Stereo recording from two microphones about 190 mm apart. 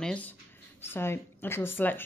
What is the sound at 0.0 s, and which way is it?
A woman's voice, 5° left (ahead or behind).